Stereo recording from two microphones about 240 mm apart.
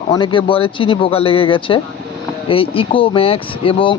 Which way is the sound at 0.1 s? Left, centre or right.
Centre.